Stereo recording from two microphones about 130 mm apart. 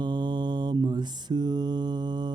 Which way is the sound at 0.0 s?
35° right (ahead or behind).